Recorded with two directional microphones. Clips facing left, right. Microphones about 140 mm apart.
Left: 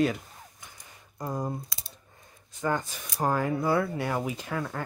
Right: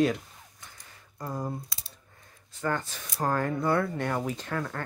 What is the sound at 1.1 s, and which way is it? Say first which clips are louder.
Speech: left 2 dB; 15° left (ahead or behind).